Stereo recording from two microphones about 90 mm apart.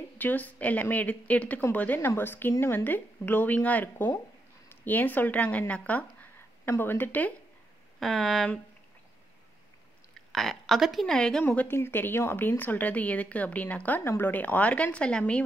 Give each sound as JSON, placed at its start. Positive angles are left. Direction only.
{"t": 0.2, "sound": "a woman's voice", "side_deg": 20}
{"t": 8.0, "sound": "speech", "side_deg": 5}
{"t": 10.1, "sound": "speech", "side_deg": 5}
{"t": 11.6, "sound": "speech", "side_deg": 25}